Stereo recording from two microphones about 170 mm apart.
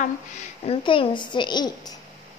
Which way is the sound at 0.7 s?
30° left (ahead or behind).